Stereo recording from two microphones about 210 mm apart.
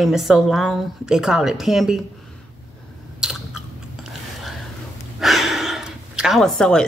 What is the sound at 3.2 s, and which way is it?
Chewing, centre (ahead or behind).